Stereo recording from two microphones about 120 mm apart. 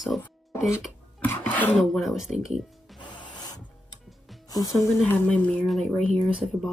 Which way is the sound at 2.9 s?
35° left (ahead or behind).